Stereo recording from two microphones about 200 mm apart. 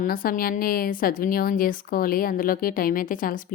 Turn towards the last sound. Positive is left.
turn(degrees=45)  # may be behind; listen again after turning